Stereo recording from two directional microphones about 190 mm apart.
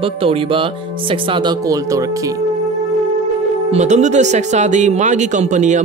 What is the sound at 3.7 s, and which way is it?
Speech, 35° right (ahead or behind).